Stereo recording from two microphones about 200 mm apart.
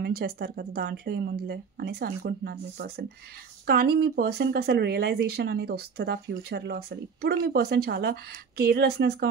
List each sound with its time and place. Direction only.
0.0 s speech: 50° right (ahead or behind)